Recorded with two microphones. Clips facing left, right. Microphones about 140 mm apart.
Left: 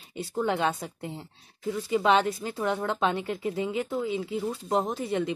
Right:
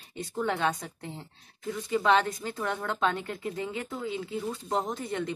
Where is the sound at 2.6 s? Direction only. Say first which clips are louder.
Left 3 dB; 25° left (ahead or behind).